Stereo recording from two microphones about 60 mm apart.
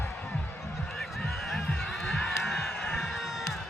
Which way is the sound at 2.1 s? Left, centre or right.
Centre.